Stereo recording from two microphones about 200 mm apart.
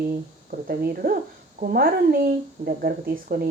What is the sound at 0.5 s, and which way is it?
A woman's voice, 50° right (ahead or behind).